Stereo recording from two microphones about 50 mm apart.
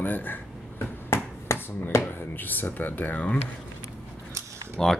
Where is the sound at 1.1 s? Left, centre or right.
Left.